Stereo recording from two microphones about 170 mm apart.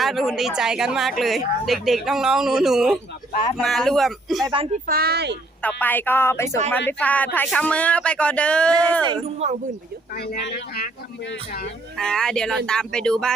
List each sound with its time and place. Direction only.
0.0 s speech: centre (ahead or behind)
4.9 s speech: 65° right (ahead or behind)
5.6 s speech: 10° left (ahead or behind)
9.0 s speech: 40° right (ahead or behind)
10.2 s a man's voice: 70° left (ahead or behind)
11.9 s speech: 5° left (ahead or behind)